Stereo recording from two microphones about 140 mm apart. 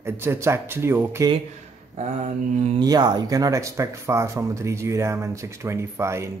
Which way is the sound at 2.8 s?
30° right (ahead or behind).